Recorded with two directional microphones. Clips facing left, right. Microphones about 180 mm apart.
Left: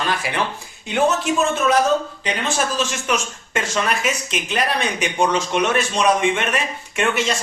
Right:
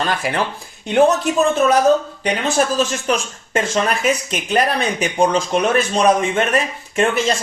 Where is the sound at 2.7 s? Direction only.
35° right (ahead or behind).